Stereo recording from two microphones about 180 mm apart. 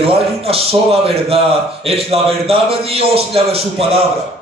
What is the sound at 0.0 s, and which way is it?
A man's voice, 30° right (ahead or behind).